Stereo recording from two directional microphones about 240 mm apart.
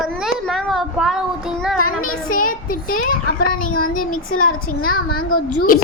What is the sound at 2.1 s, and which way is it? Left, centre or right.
Speech, left.